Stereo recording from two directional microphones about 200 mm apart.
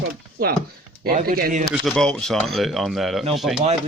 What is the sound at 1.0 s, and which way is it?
Speech, 50° right (ahead or behind).